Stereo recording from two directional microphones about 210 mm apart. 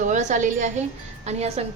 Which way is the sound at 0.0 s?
35° right (ahead or behind).